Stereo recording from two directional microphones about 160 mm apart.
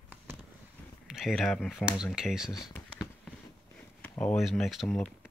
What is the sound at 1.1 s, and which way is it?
Speech, centre (ahead or behind).